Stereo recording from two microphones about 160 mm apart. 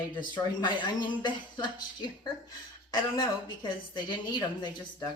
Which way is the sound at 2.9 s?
30° left (ahead or behind).